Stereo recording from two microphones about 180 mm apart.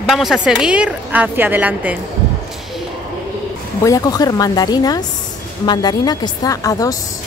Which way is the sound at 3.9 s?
20° left (ahead or behind).